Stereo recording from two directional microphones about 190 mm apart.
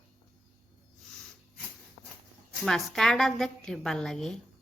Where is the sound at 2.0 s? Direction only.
20° left (ahead or behind).